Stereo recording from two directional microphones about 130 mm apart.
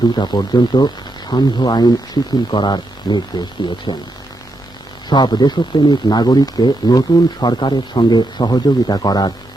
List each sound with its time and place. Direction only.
0.2 s speech: 35° left (ahead or behind)
5.0 s speech: 35° left (ahead or behind)